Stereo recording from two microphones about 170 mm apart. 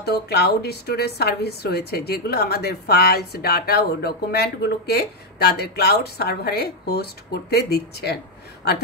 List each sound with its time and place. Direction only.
0.0 s a woman's voice: 70° left (ahead or behind)